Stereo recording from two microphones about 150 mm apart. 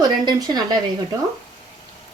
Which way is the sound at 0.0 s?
30° right (ahead or behind).